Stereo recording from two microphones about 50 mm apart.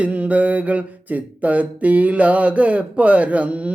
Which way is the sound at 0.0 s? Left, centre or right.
Right.